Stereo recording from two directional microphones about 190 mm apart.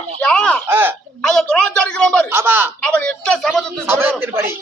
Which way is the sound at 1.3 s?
5° left (ahead or behind).